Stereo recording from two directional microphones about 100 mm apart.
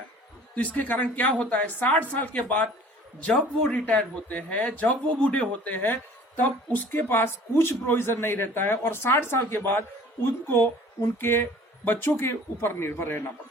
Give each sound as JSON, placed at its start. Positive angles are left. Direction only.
{"t": 0.5, "sound": "a woman's voice", "side_deg": 15}